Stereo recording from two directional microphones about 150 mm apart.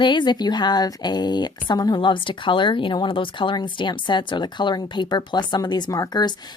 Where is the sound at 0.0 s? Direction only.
30° left (ahead or behind).